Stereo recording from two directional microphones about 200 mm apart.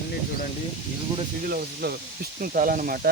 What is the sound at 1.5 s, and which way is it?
Speech, 50° right (ahead or behind).